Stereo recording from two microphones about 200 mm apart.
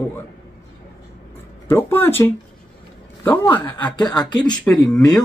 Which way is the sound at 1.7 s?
10° left (ahead or behind).